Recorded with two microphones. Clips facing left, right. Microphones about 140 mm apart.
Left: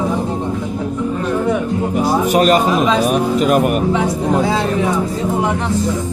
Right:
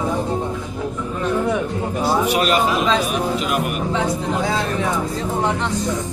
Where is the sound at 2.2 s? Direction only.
45° left (ahead or behind).